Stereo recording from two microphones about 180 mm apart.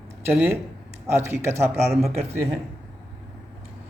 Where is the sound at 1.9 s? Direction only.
Centre (ahead or behind).